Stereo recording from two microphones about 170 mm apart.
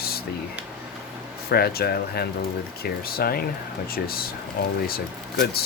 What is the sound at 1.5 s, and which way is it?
Speech, 65° left (ahead or behind).